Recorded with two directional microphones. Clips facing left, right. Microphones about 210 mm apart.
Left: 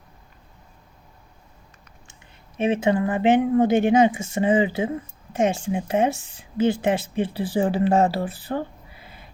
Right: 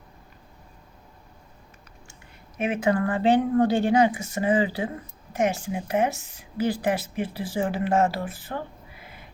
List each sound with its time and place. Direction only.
2.6 s speech: 25° left (ahead or behind)